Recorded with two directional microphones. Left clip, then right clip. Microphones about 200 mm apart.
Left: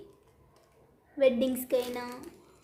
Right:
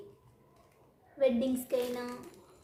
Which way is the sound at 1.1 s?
35° left (ahead or behind).